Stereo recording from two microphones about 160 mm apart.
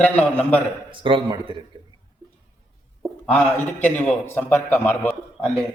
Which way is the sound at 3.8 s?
10° left (ahead or behind).